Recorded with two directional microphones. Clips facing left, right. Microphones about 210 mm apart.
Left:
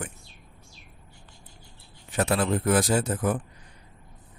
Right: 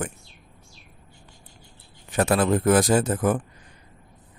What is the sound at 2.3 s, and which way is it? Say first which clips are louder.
Speech: right 5 dB; 90° right.